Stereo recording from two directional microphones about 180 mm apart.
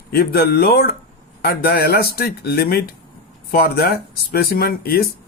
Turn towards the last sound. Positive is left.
turn(degrees=55)  # may be behind; listen again after turning